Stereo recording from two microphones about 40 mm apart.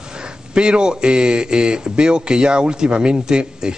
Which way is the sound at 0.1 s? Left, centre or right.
Right.